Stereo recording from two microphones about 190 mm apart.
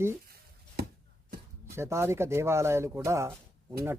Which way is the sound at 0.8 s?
55° right (ahead or behind).